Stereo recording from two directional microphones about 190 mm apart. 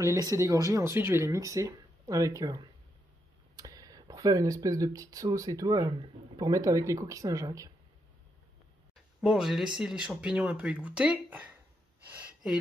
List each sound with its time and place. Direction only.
0.0 s speech: 15° right (ahead or behind)
9.2 s speech: 5° right (ahead or behind)